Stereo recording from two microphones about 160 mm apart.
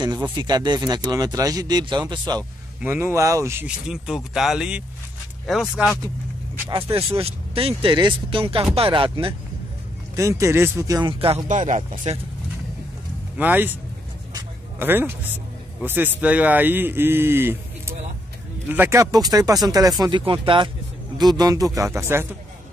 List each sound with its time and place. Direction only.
0.4 s speech: 25° right (ahead or behind)
2.8 s a man's voice: 15° right (ahead or behind)
3.6 s speech: 5° right (ahead or behind)
6.7 s speech: 35° right (ahead or behind)
10.1 s speech: 20° right (ahead or behind); by 11.4 s 35° right (ahead or behind)
11.4 s speech: 50° right (ahead or behind)
13.4 s a man's voice: 10° right (ahead or behind)
14.8 s a man's voice: 15° right (ahead or behind)